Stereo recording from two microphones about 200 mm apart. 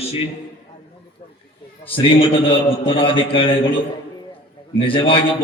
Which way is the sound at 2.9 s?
25° left (ahead or behind).